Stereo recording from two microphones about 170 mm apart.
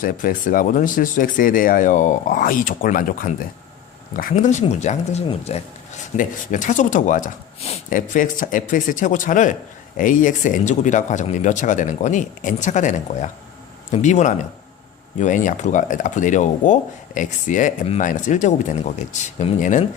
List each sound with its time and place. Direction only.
0.0 s speech: 55° left (ahead or behind)